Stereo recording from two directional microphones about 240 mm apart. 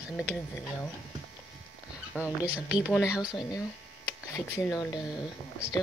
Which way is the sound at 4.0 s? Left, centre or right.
Centre.